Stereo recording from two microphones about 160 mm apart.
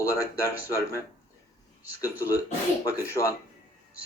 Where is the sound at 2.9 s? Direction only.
15° left (ahead or behind).